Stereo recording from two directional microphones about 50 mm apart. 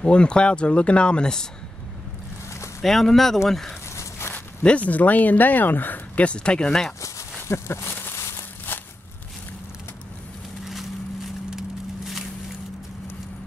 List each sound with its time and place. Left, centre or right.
0.0 s speech: centre
2.8 s speech: centre
4.6 s speech: left
6.1 s speech: left
7.4 s a sound: left
8.7 s a sound: left
10.6 s vehicle: centre